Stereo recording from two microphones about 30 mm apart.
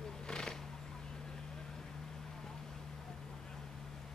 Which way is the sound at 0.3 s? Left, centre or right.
Left.